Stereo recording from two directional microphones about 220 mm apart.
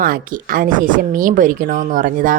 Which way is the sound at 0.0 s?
40° right (ahead or behind).